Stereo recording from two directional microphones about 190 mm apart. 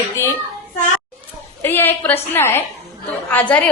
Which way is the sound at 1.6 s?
10° left (ahead or behind).